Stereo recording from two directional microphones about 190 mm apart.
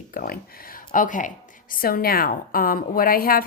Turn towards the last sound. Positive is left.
turn(degrees=50)  # may be behind; listen again after turning